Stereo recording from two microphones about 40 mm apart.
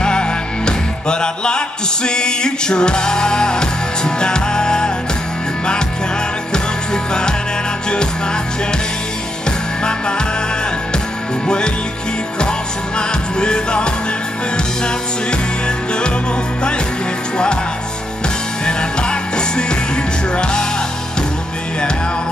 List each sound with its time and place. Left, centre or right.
0.0 s music: left
6.5 s music: centre
9.8 s music: left
11.4 s music: left
13.4 s music: left
18.7 s music: left